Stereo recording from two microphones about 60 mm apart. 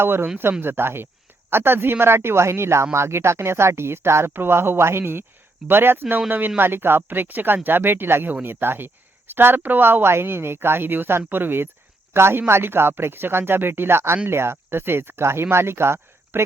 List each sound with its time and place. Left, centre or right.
0.0 s speech: right
6.6 s speech: right